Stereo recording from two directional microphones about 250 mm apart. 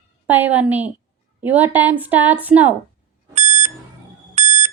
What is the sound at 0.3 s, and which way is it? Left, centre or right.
A woman's voice, centre.